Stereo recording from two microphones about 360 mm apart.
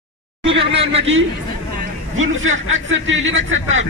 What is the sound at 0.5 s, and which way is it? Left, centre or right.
Speech, centre.